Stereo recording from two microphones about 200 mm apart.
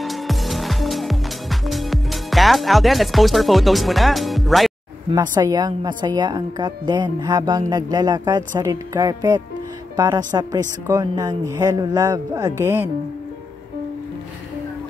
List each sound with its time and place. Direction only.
0.0 s music: centre (ahead or behind)
5.1 s a woman's voice: 20° right (ahead or behind)